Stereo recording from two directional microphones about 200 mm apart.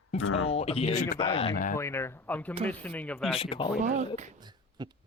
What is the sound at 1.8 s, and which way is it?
A man's voice, 15° left (ahead or behind).